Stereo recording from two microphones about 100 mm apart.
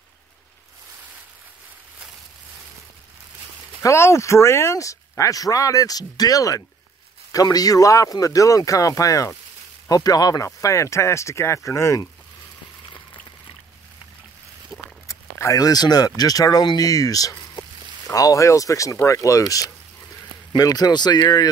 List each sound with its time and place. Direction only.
3.8 s speech: 30° left (ahead or behind)
14.7 s walk: centre (ahead or behind)
15.0 s speech: 30° left (ahead or behind)